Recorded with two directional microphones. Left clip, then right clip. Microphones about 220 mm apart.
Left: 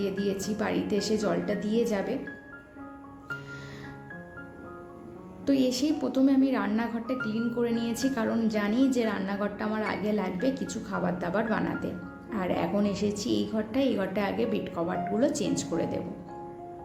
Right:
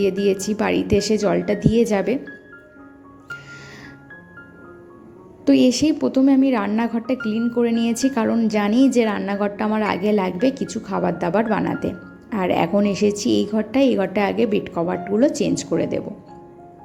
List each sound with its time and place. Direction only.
0.0 s a woman's voice: 35° right (ahead or behind)
5.5 s a woman's voice: 35° right (ahead or behind)
7.8 s speech: centre (ahead or behind)
8.1 s a woman's voice: 30° right (ahead or behind)